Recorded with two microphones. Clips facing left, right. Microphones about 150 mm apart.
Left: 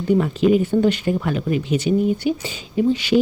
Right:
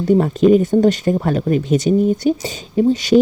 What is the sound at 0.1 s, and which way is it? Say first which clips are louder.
Speech: right 4 dB; 40° right (ahead or behind).